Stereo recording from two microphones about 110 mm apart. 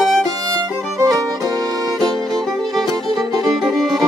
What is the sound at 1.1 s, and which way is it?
Violin, 35° right (ahead or behind).